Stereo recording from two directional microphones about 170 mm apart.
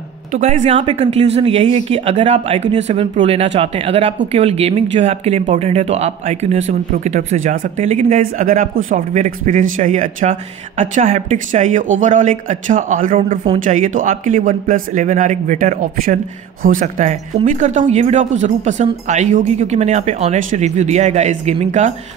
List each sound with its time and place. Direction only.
0.3 s speech: 40° right (ahead or behind)
8.2 s speech: 50° right (ahead or behind)